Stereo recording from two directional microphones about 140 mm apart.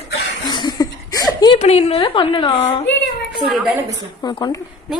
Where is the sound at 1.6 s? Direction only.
50° left (ahead or behind).